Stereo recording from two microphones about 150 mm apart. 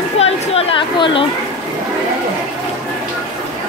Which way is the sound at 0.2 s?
40° left (ahead or behind).